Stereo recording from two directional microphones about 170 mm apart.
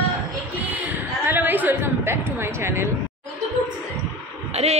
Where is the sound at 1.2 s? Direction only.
10° right (ahead or behind).